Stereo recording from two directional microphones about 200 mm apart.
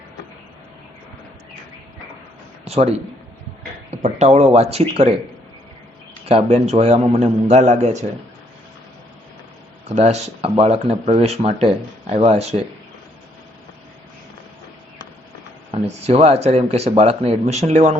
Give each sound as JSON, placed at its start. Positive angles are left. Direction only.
{"t": 2.6, "sound": "a man's voice", "side_deg": -30}
{"t": 6.2, "sound": "speech", "side_deg": -30}
{"t": 9.9, "sound": "speech", "side_deg": -35}
{"t": 15.7, "sound": "speech", "side_deg": -30}